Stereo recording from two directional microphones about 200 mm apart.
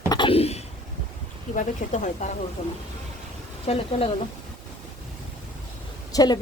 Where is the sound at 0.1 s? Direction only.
25° left (ahead or behind).